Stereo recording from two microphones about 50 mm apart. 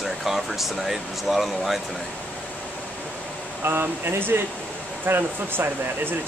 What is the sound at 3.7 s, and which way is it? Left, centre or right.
Speech, right.